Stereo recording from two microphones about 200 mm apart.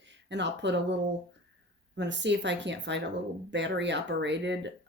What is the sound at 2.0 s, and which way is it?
Speech, 65° right (ahead or behind).